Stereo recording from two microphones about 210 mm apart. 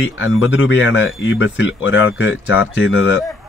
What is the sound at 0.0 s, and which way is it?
Speech, 65° left (ahead or behind).